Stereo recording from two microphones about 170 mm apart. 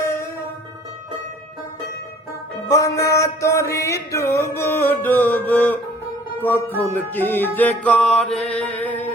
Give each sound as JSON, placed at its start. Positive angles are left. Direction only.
{"t": 2.6, "sound": "music", "side_deg": 20}